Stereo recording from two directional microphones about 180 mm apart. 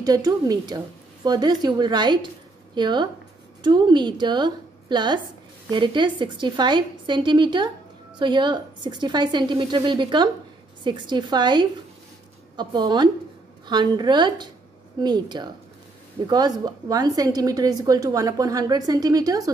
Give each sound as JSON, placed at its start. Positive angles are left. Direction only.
{"t": 0.0, "sound": "a woman's voice", "side_deg": -20}